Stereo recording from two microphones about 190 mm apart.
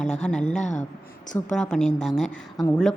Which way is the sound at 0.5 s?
40° left (ahead or behind).